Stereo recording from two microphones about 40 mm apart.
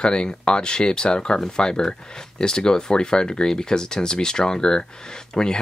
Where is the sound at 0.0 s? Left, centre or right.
Left.